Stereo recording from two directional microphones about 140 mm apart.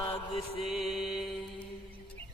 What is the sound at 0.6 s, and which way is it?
Speech, centre (ahead or behind).